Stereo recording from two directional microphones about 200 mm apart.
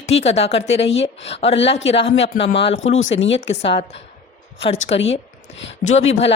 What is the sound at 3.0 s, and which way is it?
Speech, 70° left (ahead or behind).